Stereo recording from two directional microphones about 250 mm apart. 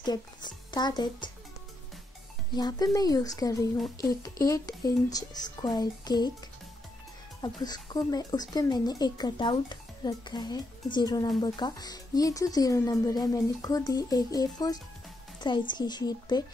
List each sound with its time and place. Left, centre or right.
0.0 s a child's voice: centre
2.5 s speech: centre
7.4 s speech: centre